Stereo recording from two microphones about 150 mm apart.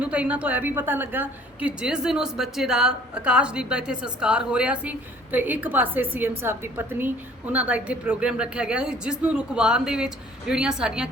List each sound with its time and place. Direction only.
0.0 s a woman's voice: 10° right (ahead or behind)